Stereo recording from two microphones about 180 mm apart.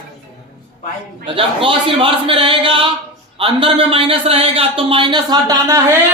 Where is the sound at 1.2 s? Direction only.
30° right (ahead or behind).